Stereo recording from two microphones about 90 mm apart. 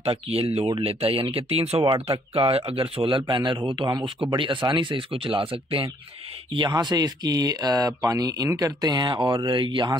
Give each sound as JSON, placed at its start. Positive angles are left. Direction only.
{"t": 0.0, "sound": "speech", "side_deg": -90}
{"t": 6.5, "sound": "speech", "side_deg": -55}